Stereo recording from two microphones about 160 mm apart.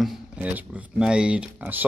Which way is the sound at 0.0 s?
5° right (ahead or behind).